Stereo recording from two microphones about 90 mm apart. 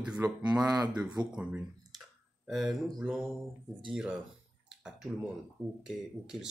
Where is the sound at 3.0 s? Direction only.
5° right (ahead or behind).